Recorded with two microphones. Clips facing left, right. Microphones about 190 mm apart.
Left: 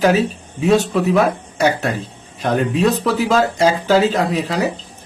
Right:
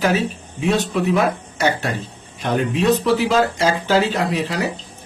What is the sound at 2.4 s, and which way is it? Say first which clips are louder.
Speech: left 3 dB; 40° left (ahead or behind).